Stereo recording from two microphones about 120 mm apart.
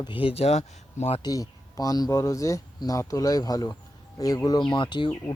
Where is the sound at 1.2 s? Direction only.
30° left (ahead or behind).